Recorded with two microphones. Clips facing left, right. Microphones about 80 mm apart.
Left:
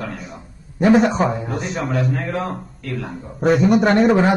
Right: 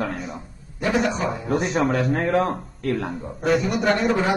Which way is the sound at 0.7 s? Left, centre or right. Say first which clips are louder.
Left 8 dB; left.